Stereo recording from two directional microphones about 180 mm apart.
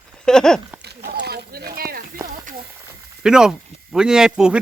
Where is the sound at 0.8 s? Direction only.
65° right (ahead or behind).